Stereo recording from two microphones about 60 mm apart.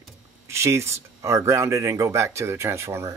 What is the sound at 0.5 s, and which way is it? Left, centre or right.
Speech, right.